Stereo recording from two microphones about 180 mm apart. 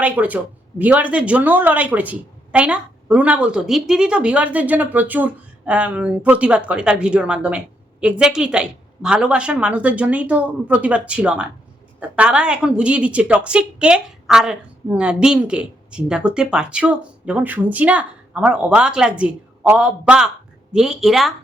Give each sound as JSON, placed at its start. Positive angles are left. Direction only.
{"t": 0.0, "sound": "a woman's voice", "side_deg": -10}